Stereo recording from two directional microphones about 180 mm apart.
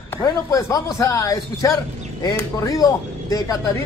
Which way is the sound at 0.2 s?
15° left (ahead or behind).